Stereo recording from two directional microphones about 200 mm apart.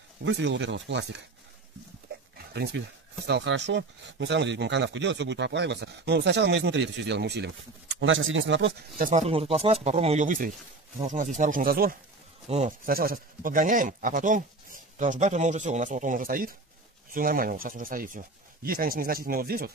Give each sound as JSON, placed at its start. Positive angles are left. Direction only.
{"t": 0.2, "sound": "speech", "side_deg": -65}
{"t": 2.3, "sound": "a sound", "side_deg": -55}
{"t": 3.3, "sound": "speech", "side_deg": -60}
{"t": 8.0, "sound": "speech", "side_deg": -75}
{"t": 8.9, "sound": "speech", "side_deg": -40}
{"t": 12.4, "sound": "speech", "side_deg": -35}
{"t": 12.8, "sound": "speech", "side_deg": -45}